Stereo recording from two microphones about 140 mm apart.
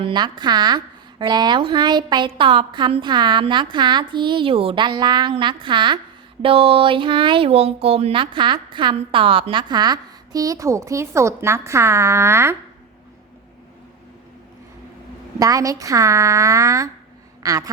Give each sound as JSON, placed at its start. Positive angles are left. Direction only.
{"t": 0.0, "sound": "speech", "side_deg": -35}
{"t": 15.4, "sound": "a woman's voice", "side_deg": -25}